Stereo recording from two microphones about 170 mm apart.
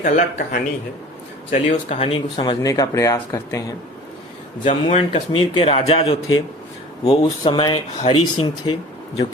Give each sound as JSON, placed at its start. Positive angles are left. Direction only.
{"t": 0.0, "sound": "speech", "side_deg": 55}
{"t": 1.5, "sound": "a man's voice", "side_deg": 35}
{"t": 4.6, "sound": "a man's voice", "side_deg": 40}